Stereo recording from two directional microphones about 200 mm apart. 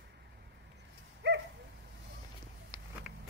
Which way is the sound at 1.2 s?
60° right (ahead or behind).